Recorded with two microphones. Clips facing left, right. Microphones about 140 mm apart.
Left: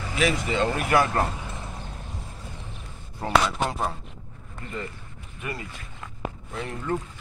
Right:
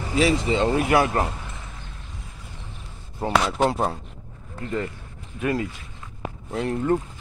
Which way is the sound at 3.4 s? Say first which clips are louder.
Right 5 dB; 30° right (ahead or behind).